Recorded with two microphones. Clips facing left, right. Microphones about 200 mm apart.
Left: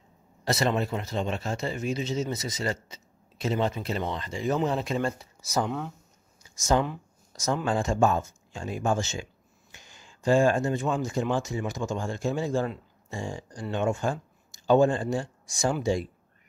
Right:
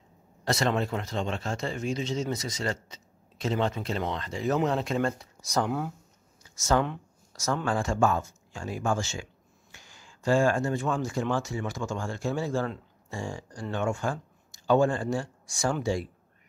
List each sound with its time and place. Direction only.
0.5 s speech: 5° left (ahead or behind)
6.4 s a sound: 15° left (ahead or behind)
7.6 s speech: 20° left (ahead or behind)